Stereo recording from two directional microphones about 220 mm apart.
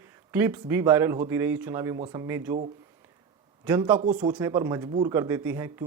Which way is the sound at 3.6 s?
10° right (ahead or behind).